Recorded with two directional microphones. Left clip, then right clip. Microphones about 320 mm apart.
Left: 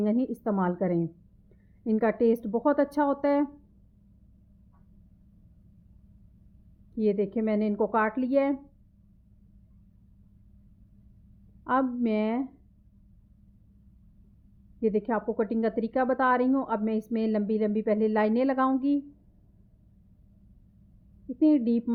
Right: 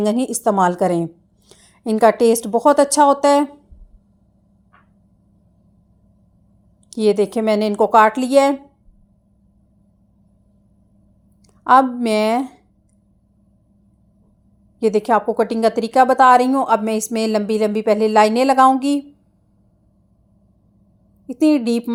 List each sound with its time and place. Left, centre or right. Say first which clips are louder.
0.0 s a woman's voice: right 11 dB; centre
6.9 s a woman's voice: right 11 dB; centre
11.6 s a woman's voice: right 14 dB; centre
14.8 s a woman's voice: right 12 dB; centre
21.3 s a woman's voice: right 8 dB; centre